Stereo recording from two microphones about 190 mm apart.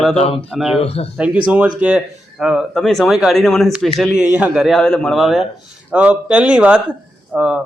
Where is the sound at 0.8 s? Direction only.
30° left (ahead or behind).